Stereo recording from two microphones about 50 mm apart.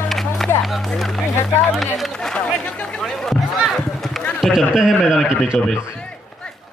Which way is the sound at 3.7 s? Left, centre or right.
Centre.